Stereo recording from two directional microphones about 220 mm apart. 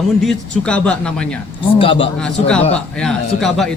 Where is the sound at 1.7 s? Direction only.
25° left (ahead or behind).